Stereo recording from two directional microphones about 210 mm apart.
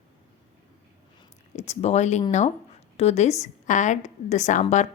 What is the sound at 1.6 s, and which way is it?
A woman's voice, 30° left (ahead or behind).